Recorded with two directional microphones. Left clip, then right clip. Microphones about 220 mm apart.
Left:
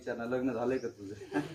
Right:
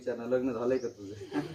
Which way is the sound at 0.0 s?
15° left (ahead or behind).